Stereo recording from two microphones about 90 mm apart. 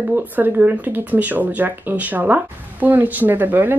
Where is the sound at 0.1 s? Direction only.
20° right (ahead or behind).